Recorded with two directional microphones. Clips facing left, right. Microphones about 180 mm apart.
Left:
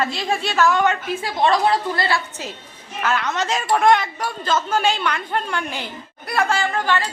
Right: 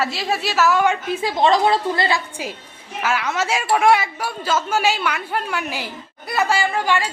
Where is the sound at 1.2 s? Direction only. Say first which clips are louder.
Right 2 dB; 20° right (ahead or behind).